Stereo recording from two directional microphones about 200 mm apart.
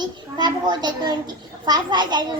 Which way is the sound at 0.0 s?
20° right (ahead or behind).